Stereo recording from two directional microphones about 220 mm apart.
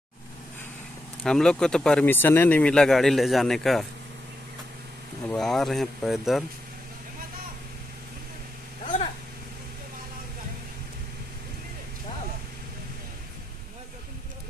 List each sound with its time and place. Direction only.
1.2 s speech: 5° left (ahead or behind)
5.3 s speech: centre (ahead or behind)